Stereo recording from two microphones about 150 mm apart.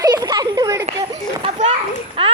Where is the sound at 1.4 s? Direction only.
50° right (ahead or behind).